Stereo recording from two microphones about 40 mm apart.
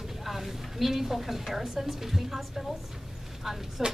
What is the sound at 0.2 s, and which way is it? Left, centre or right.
A woman's voice, centre.